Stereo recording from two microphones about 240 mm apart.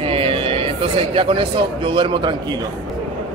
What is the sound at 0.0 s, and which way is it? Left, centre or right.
Speech, right.